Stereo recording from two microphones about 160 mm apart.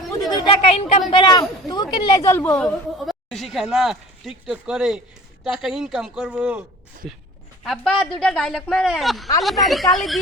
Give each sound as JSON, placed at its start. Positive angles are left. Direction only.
{"t": 0.2, "sound": "a sound", "side_deg": 25}
{"t": 0.7, "sound": "speech", "side_deg": 40}
{"t": 1.2, "sound": "a woman's voice", "side_deg": 25}
{"t": 3.1, "sound": "a woman's voice", "side_deg": 0}